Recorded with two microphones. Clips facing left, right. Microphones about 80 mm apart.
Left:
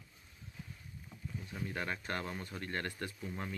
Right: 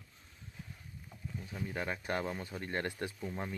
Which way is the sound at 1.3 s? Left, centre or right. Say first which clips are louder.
Right 1 dB; centre.